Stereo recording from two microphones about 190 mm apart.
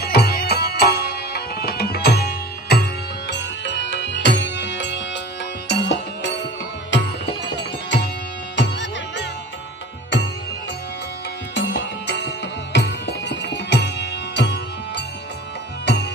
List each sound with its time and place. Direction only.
0.0 s music: 55° left (ahead or behind)
11.5 s music: 65° left (ahead or behind)